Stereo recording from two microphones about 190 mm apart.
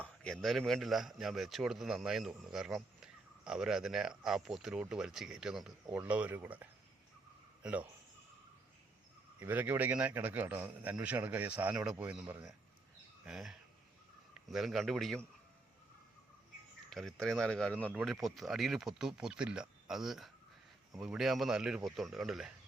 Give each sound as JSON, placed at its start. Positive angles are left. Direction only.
{"t": 0.0, "sound": "a man's voice", "side_deg": 0}
{"t": 9.4, "sound": "a man's voice", "side_deg": -10}
{"t": 16.9, "sound": "a man's voice", "side_deg": 0}